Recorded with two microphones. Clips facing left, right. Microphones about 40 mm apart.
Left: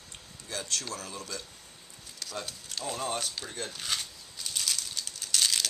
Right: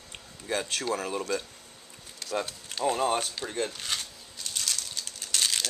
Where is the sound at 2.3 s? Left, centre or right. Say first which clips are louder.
Right 7 dB; centre.